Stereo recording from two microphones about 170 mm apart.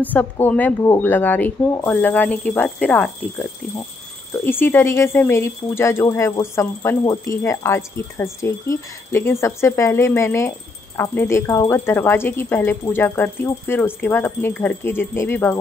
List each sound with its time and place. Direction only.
0.0 s speech: 10° left (ahead or behind)
4.5 s speech: 10° left (ahead or behind)